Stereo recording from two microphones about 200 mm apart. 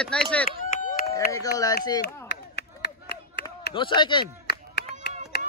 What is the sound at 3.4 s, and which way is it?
Speech, 25° left (ahead or behind).